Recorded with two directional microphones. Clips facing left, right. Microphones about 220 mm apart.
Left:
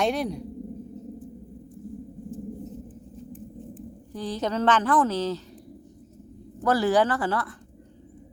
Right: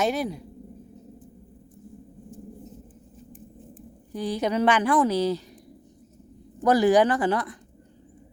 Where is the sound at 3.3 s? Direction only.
10° right (ahead or behind).